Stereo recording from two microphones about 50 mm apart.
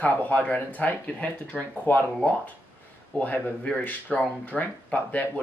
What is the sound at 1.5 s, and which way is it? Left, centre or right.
Speech, centre.